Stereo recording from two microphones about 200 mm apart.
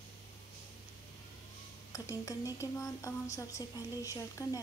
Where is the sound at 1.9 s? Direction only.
15° left (ahead or behind).